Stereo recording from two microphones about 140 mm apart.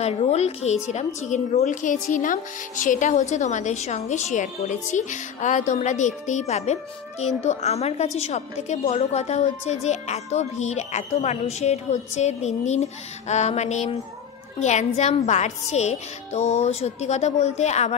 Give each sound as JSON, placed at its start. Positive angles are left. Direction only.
{"t": 0.0, "sound": "a woman's voice", "side_deg": 50}